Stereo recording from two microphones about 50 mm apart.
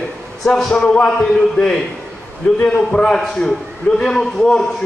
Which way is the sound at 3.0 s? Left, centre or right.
Centre.